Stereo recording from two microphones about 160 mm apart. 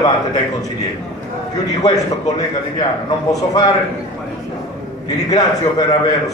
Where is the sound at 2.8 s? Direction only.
25° left (ahead or behind).